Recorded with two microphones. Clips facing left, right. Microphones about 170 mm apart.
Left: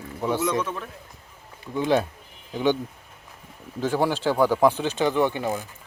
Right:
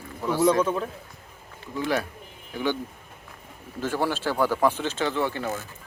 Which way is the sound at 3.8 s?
15° left (ahead or behind).